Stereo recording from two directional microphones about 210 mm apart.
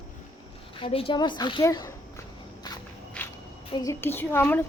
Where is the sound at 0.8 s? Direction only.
25° left (ahead or behind).